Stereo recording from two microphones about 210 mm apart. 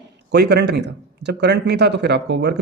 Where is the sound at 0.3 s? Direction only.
50° right (ahead or behind).